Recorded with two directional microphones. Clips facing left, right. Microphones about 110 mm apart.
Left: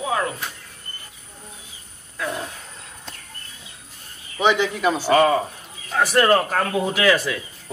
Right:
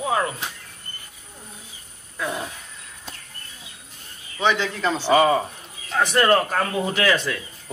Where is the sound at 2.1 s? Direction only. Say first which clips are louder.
Even; 5° right (ahead or behind).